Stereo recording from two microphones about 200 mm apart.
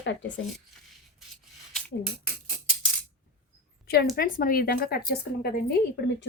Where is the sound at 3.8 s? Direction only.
50° left (ahead or behind).